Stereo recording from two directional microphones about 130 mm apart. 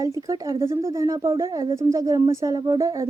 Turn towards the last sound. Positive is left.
turn(degrees=-25)  # may be behind; listen again after turning